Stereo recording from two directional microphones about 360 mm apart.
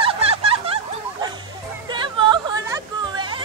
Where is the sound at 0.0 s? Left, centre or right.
Centre.